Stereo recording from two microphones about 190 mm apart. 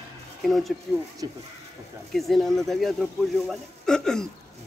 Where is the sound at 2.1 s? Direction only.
Centre (ahead or behind).